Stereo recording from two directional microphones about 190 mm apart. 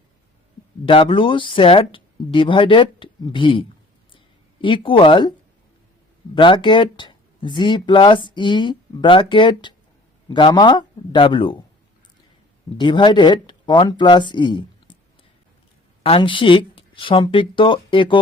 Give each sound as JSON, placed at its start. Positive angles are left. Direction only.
{"t": 0.9, "sound": "speech", "side_deg": 25}
{"t": 6.3, "sound": "speech", "side_deg": 25}
{"t": 12.7, "sound": "speech", "side_deg": 25}
{"t": 16.0, "sound": "speech", "side_deg": 25}